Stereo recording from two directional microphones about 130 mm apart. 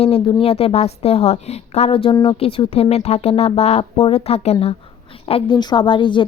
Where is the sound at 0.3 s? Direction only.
40° left (ahead or behind).